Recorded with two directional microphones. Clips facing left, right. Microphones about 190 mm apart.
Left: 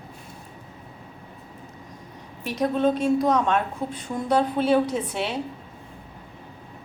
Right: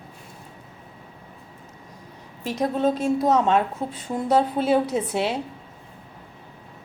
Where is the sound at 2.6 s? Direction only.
25° right (ahead or behind).